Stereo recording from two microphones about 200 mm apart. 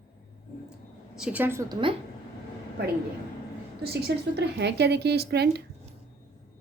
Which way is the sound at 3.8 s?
55° right (ahead or behind).